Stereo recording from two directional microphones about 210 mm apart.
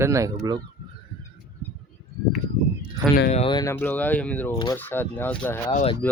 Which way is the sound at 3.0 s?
20° right (ahead or behind).